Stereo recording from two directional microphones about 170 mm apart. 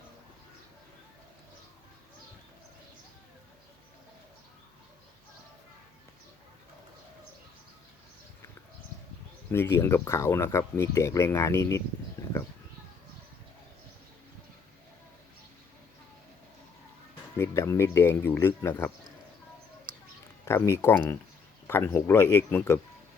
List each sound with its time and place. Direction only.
9.5 s speech: 15° left (ahead or behind)
17.3 s speech: 15° left (ahead or behind)
20.4 s speech: 15° left (ahead or behind)